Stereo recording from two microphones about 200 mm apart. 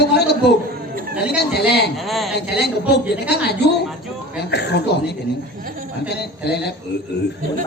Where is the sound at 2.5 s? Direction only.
55° left (ahead or behind).